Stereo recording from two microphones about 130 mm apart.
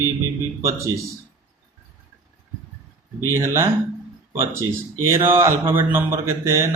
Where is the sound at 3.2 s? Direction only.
20° right (ahead or behind).